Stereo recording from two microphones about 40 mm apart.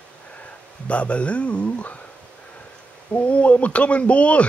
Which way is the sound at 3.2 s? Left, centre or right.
Left.